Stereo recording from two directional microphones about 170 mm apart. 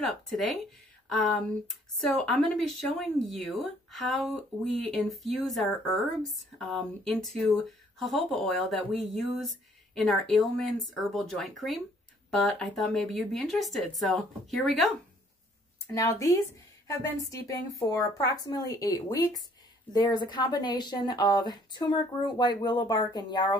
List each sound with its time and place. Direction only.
0.0 s speech: centre (ahead or behind)
1.7 s speech: centre (ahead or behind)
15.9 s speech: 20° left (ahead or behind)